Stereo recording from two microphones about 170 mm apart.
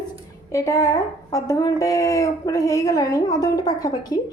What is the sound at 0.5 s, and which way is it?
A woman's voice, 20° left (ahead or behind).